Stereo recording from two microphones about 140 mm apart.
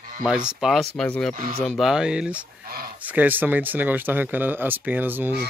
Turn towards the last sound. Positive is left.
turn(degrees=-15)  # may be behind; listen again after turning